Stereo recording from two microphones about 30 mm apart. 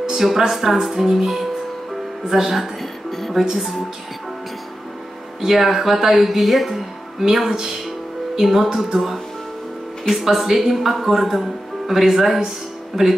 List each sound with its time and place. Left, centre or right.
0.1 s a sound: centre
0.5 s speech: centre
2.2 s music: centre
3.5 s speech: centre
5.4 s speech: centre
6.2 s speech: centre
7.2 s speech: centre
10.2 s speech: centre